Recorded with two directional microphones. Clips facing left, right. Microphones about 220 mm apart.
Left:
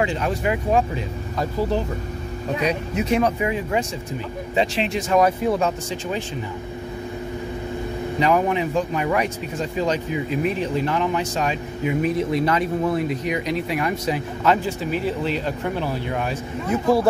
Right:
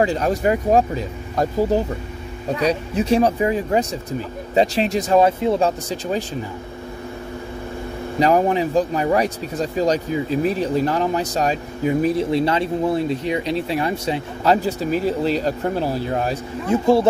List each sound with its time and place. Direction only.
0.0 s speech: 40° right (ahead or behind)
2.6 s speech: 30° right (ahead or behind)
8.2 s speech: 35° right (ahead or behind)
16.7 s speech: 25° right (ahead or behind)